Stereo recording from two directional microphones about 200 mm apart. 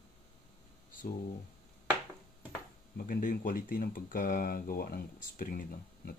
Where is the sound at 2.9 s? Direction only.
45° left (ahead or behind).